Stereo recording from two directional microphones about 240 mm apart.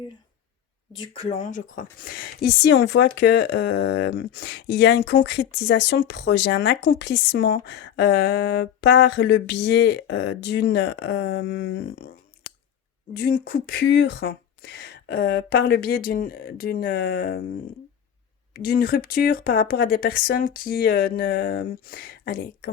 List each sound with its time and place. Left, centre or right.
0.9 s a woman's voice: left
13.1 s speech: left